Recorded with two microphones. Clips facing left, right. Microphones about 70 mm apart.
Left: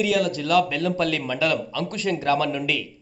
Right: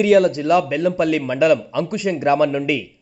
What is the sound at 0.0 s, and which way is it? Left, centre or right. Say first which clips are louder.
Speech: right 8 dB; right.